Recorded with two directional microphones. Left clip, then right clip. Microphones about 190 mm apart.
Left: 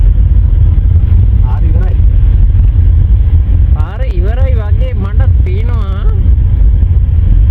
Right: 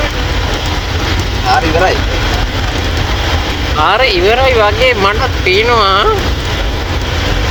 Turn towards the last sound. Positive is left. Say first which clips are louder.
# right 18 dB
turn(degrees=-15)  # may be behind; listen again after turning